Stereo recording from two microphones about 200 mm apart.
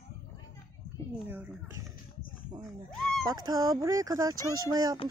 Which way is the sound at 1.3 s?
10° right (ahead or behind).